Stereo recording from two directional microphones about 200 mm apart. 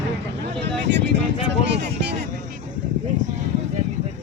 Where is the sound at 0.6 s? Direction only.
60° right (ahead or behind).